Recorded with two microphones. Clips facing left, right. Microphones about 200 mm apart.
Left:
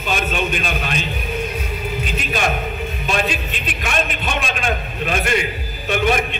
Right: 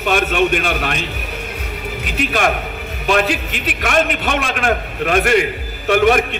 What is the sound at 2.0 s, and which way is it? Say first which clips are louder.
A man's voice: right 6 dB; 70° right (ahead or behind).